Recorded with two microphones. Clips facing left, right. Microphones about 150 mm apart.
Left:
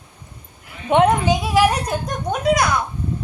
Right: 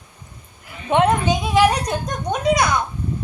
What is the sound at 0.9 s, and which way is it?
A child's voice, 15° left (ahead or behind).